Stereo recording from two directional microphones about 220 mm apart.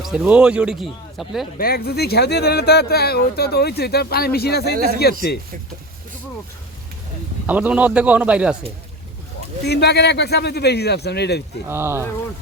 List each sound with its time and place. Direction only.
0.0 s a man's voice: 5° right (ahead or behind)
1.5 s speech: 45° left (ahead or behind)
4.7 s speech: 40° right (ahead or behind)
7.4 s a man's voice: 5° right (ahead or behind)
9.6 s speech: 50° left (ahead or behind)
11.7 s a man's voice: 10° right (ahead or behind)